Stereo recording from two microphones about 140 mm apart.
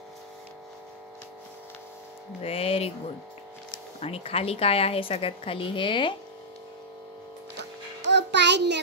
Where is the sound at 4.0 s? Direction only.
45° left (ahead or behind).